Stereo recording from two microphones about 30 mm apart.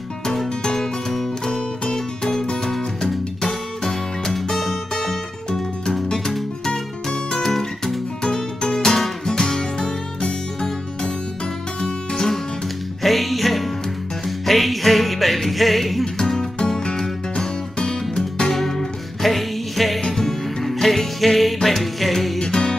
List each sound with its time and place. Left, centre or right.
1.5 s music: left
7.4 s music: centre
13.0 s music: centre
16.2 s music: centre
17.7 s music: left
18.5 s music: centre
22.4 s music: left